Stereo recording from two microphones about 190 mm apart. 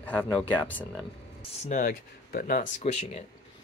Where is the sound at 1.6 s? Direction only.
40° left (ahead or behind).